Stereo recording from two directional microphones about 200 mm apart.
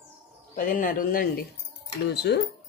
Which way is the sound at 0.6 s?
40° left (ahead or behind).